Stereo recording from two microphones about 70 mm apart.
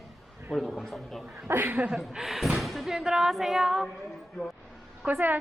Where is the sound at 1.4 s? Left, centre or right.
Right.